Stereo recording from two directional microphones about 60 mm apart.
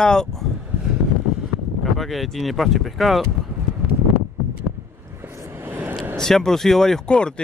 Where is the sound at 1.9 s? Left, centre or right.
Centre.